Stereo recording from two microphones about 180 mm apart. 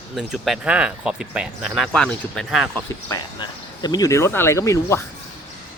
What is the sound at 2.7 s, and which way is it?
Speech, 20° left (ahead or behind).